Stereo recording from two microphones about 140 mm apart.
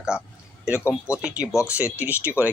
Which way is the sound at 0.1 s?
5° right (ahead or behind).